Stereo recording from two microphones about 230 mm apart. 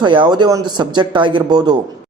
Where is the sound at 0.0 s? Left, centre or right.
Right.